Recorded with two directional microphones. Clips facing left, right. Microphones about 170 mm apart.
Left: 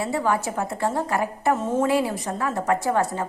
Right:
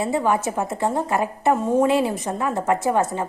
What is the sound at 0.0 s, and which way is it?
A woman's voice, 20° right (ahead or behind).